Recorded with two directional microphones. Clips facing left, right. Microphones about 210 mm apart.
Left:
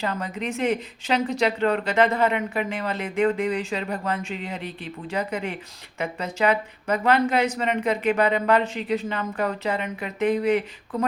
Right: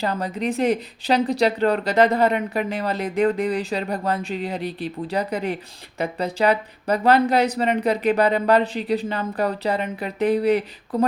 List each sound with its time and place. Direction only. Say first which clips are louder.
0.0 s a woman's voice: right 4 dB; 35° right (ahead or behind)